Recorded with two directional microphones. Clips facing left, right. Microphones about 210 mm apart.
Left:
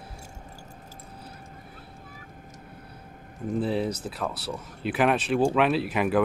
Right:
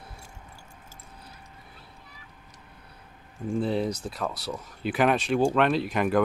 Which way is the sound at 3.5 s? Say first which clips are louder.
Even; centre (ahead or behind).